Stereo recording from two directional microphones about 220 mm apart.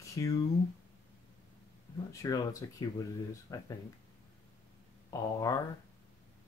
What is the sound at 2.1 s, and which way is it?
Speech, 15° left (ahead or behind).